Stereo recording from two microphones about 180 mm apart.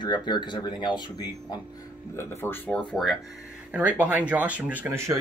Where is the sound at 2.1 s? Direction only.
10° left (ahead or behind).